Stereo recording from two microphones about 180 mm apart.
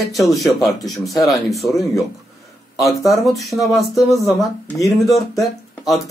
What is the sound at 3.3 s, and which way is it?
Speech, centre (ahead or behind).